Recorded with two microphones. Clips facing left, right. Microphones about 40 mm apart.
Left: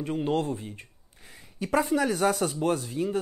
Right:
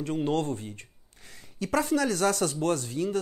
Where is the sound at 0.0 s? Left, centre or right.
Centre.